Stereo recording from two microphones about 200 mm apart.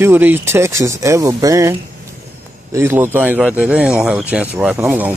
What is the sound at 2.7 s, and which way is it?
Speech, 10° right (ahead or behind).